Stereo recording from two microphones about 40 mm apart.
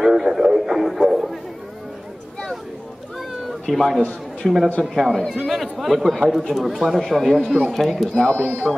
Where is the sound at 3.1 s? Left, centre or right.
Centre.